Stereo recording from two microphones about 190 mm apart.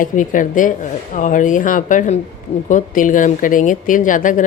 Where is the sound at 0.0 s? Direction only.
45° left (ahead or behind).